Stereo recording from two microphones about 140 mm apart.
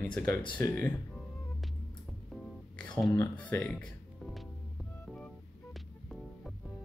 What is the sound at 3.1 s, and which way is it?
Speech, 10° left (ahead or behind).